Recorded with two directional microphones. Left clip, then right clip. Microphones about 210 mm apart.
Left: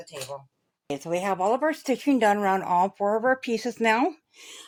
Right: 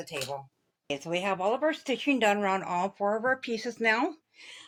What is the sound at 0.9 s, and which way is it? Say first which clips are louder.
Speech: left 3 dB; 40° left (ahead or behind).